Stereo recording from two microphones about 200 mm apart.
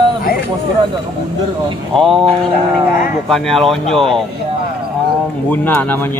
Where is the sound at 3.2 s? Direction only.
Centre (ahead or behind).